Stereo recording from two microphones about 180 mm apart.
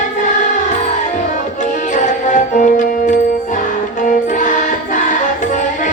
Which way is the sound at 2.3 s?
45° left (ahead or behind).